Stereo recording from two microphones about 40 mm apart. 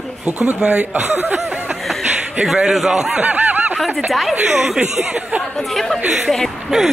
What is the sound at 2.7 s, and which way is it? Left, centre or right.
Speech, centre.